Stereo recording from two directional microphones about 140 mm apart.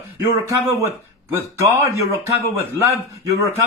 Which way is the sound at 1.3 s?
20° right (ahead or behind).